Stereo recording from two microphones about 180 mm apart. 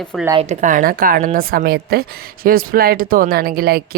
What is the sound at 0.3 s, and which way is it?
A woman's voice, 45° right (ahead or behind).